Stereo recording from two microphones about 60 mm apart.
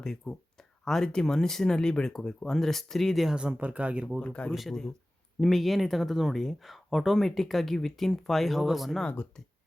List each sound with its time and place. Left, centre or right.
0.0 s speech: centre
3.3 s speech: right
4.2 s speech: left
4.7 s speech: centre